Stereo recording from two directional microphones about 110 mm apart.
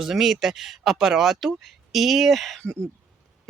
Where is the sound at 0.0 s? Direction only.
5° right (ahead or behind).